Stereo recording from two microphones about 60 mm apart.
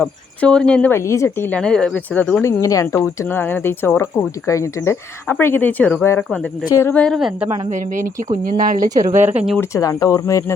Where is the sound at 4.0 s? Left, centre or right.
Left.